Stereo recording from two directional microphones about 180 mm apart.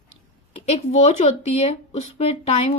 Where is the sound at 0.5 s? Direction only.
35° left (ahead or behind).